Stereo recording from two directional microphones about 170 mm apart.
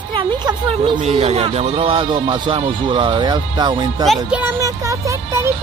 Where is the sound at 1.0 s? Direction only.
35° right (ahead or behind).